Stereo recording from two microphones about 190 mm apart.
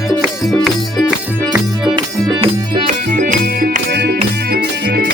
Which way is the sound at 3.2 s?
45° right (ahead or behind).